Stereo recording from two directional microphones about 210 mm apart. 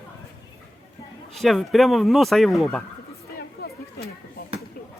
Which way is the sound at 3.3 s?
50° left (ahead or behind).